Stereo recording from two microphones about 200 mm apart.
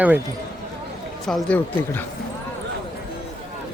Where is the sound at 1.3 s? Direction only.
5° left (ahead or behind).